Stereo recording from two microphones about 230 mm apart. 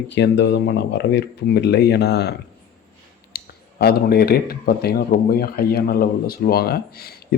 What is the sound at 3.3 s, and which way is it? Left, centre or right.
Speech, left.